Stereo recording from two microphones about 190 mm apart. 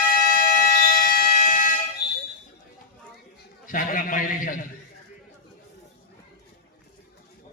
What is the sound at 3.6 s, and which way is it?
A man's voice, 45° left (ahead or behind).